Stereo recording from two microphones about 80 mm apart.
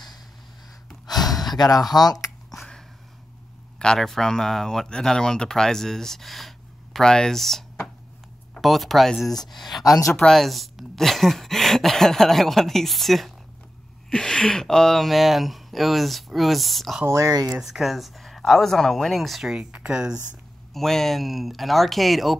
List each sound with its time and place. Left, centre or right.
1.5 s speech: left
2.5 s a sound: centre
3.8 s speech: centre
9.8 s speech: left
10.1 s speech: centre
17.0 s speech: right
17.5 s speech: centre
20.7 s speech: centre